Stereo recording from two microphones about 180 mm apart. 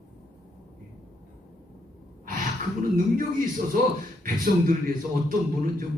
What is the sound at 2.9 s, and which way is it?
A man's voice, 50° right (ahead or behind).